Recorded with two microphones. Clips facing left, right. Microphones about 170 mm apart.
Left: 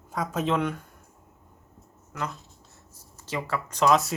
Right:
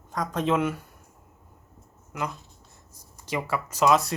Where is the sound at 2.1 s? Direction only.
15° right (ahead or behind).